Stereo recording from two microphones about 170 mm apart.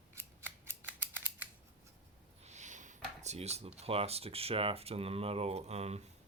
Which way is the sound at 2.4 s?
40° right (ahead or behind).